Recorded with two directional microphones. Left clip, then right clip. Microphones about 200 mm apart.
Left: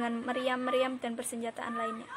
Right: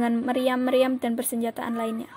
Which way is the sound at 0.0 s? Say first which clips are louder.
Right 8 dB; 30° right (ahead or behind).